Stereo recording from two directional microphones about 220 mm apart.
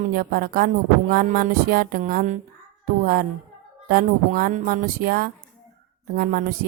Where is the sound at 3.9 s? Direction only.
40° right (ahead or behind).